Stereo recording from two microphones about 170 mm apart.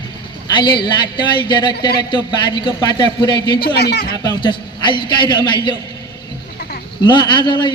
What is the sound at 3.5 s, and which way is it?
Speech, 65° left (ahead or behind).